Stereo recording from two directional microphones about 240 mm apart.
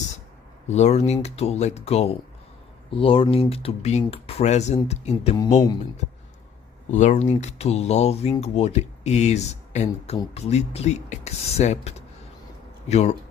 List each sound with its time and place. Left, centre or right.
0.7 s speech: left
6.9 s speech: left